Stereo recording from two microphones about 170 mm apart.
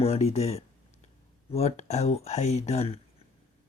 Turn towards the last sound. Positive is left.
turn(degrees=40)  # may be behind; listen again after turning